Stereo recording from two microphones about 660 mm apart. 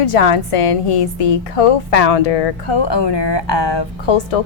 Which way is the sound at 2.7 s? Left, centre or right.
Left.